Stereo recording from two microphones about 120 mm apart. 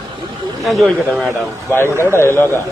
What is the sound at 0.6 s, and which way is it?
Speech, centre (ahead or behind).